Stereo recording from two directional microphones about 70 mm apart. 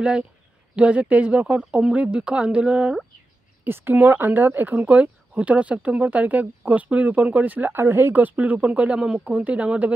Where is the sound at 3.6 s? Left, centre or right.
Right.